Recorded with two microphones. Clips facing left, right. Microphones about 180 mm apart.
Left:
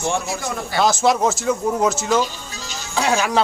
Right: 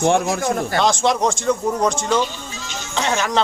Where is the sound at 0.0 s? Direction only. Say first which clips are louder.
Right 6 dB; 55° right (ahead or behind).